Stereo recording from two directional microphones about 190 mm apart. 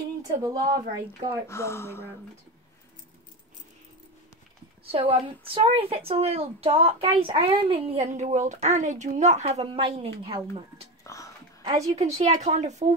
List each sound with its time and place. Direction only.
0.4 s speech: 20° right (ahead or behind)
1.5 s speech: 15° left (ahead or behind)
4.9 s a woman's voice: 30° right (ahead or behind)
11.9 s a woman's voice: 35° right (ahead or behind)